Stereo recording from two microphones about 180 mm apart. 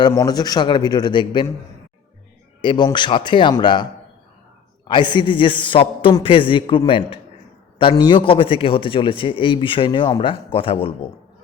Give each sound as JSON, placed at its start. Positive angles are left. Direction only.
{"t": 0.1, "sound": "a man's voice", "side_deg": 20}
{"t": 2.6, "sound": "a man's voice", "side_deg": 25}
{"t": 4.9, "sound": "a man's voice", "side_deg": 25}